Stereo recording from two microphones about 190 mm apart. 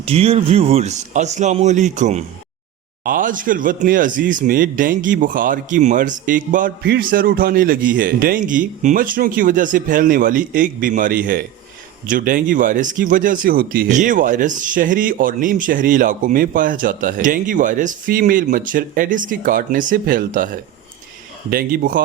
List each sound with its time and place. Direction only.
0.0 s speech: 30° right (ahead or behind); by 22.0 s 50° right (ahead or behind)